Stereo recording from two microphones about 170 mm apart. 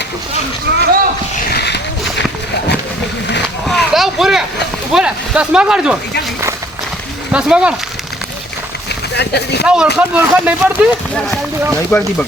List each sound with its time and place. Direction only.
0.7 s speech: 75° right (ahead or behind)
1.5 s a sound: 75° left (ahead or behind)
3.7 s a sound: centre (ahead or behind)
4.9 s speech: 5° right (ahead or behind)
7.3 s speech: 5° right (ahead or behind)
9.1 s speech: 75° left (ahead or behind)
9.6 s speech: 5° right (ahead or behind)
11.7 s speech: 5° left (ahead or behind)